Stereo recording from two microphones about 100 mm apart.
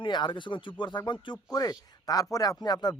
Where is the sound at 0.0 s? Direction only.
50° left (ahead or behind).